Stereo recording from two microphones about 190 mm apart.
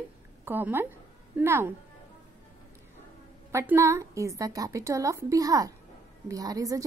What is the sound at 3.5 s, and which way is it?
A woman's voice, 15° right (ahead or behind).